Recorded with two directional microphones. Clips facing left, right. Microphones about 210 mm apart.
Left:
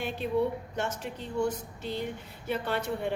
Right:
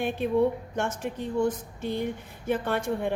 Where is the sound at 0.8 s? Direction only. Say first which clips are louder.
Right 4 dB; 50° right (ahead or behind).